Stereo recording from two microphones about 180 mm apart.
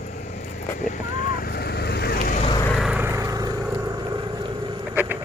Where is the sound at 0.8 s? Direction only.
45° left (ahead or behind).